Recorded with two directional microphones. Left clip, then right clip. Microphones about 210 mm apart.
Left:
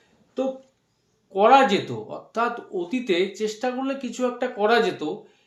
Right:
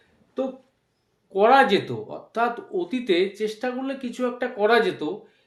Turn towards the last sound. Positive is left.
turn(degrees=-5)  # may be behind; listen again after turning